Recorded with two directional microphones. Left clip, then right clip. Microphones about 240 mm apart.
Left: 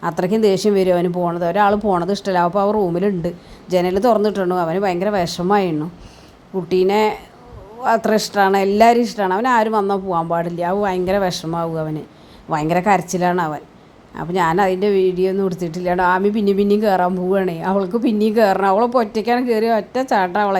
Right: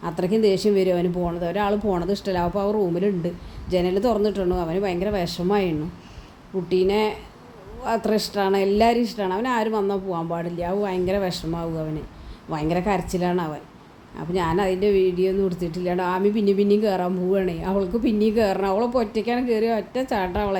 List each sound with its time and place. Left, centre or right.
0.0 s speech: centre